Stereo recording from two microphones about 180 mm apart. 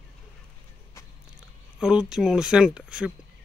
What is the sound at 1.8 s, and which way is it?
Speech, 5° right (ahead or behind).